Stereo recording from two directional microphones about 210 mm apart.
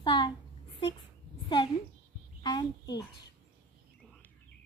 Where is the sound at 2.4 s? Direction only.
20° left (ahead or behind).